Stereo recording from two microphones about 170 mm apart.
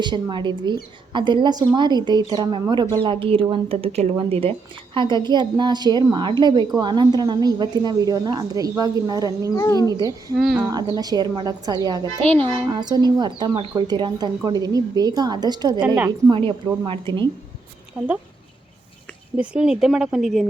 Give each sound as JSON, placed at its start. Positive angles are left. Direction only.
{"t": 0.0, "sound": "a woman's voice", "side_deg": -25}
{"t": 9.6, "sound": "speech", "side_deg": 20}
{"t": 10.3, "sound": "speech", "side_deg": -5}
{"t": 10.7, "sound": "a woman's voice", "side_deg": -20}
{"t": 19.4, "sound": "speech", "side_deg": -5}